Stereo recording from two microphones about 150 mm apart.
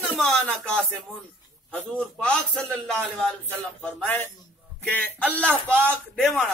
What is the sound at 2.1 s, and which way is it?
Speech, 5° left (ahead or behind).